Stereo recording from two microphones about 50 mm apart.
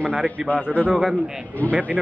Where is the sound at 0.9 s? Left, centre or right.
Centre.